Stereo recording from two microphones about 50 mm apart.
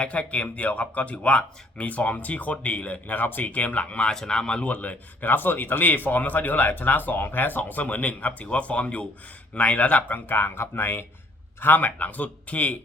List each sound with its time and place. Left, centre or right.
0.0 s speech: left
4.1 s speech: centre
4.6 s speech: left